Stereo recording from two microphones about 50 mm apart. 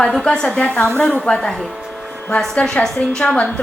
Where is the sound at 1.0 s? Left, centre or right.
Centre.